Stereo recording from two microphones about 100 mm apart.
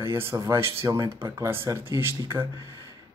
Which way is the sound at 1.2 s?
25° right (ahead or behind).